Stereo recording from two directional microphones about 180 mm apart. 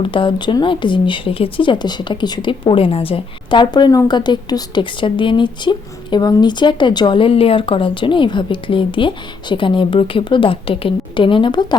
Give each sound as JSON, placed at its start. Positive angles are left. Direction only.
{"t": 0.0, "sound": "speech", "side_deg": 30}